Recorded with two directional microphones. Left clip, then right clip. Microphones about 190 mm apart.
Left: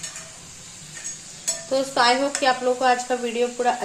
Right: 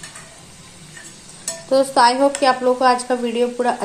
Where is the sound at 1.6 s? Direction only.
15° right (ahead or behind).